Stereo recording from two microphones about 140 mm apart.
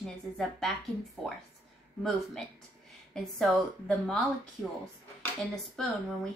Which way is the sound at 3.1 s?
5° left (ahead or behind).